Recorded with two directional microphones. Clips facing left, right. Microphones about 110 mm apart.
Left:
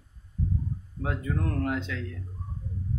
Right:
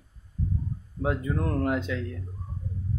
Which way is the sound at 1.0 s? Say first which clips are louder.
Right 3 dB; 20° right (ahead or behind).